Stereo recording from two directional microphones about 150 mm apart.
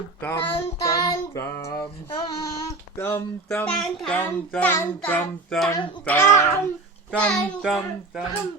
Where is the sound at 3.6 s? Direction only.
5° left (ahead or behind).